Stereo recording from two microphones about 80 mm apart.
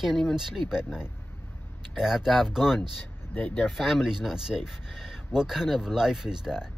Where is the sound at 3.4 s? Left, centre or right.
Left.